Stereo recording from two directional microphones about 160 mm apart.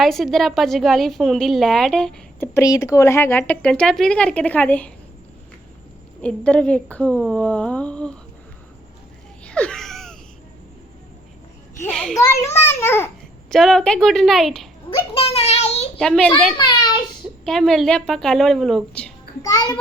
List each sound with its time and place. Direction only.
0.0 s a woman's voice: centre (ahead or behind)
2.4 s speech: 20° left (ahead or behind)
6.2 s speech: 10° left (ahead or behind)
9.4 s a sound: 5° left (ahead or behind)
11.9 s a woman's voice: 5° left (ahead or behind)
12.3 s speech: 15° left (ahead or behind)
13.5 s a woman's voice: 5° left (ahead or behind)
14.8 s a child's voice: 35° left (ahead or behind)
16.0 s a woman's voice: 5° left (ahead or behind)
16.6 s a child's voice: 30° left (ahead or behind)
17.4 s a woman's voice: 5° left (ahead or behind)
19.4 s a child's voice: 25° left (ahead or behind)